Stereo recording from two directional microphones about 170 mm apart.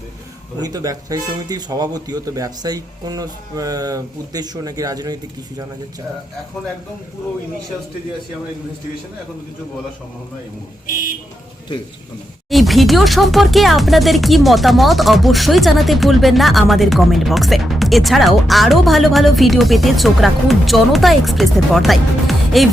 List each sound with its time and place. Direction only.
0.6 s speech: 20° right (ahead or behind)
12.5 s speech: centre (ahead or behind)